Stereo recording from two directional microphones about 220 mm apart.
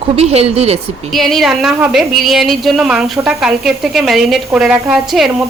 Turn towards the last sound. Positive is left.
turn(degrees=0)  # may be behind; listen again after turning